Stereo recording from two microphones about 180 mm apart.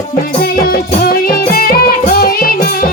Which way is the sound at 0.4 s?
55° left (ahead or behind).